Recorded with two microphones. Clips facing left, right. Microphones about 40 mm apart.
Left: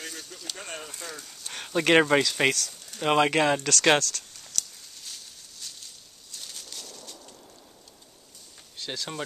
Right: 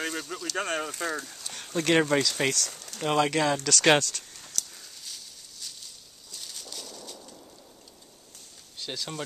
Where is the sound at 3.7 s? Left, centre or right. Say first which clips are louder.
Even; centre.